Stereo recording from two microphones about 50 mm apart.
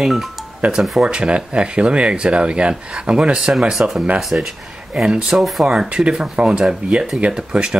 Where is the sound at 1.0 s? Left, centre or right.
Centre.